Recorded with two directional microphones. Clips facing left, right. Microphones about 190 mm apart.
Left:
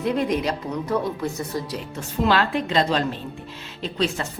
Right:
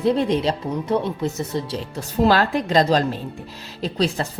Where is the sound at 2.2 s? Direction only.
40° right (ahead or behind).